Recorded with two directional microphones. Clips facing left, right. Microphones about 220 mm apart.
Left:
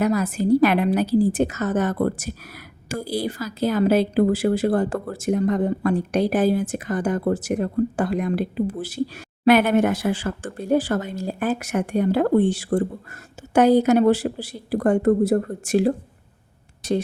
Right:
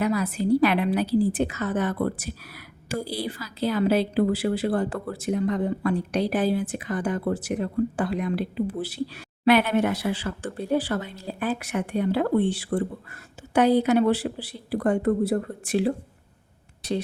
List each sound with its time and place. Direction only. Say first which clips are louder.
0.0 s a woman's voice: left 3 dB; 45° left (ahead or behind)